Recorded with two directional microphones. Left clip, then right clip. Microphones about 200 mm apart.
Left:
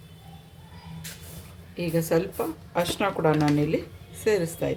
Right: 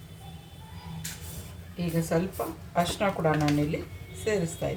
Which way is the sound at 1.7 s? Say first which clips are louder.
Left 4 dB; 55° left (ahead or behind).